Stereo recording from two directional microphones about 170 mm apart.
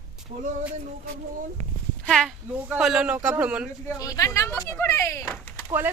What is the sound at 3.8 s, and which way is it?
Speech, 20° left (ahead or behind).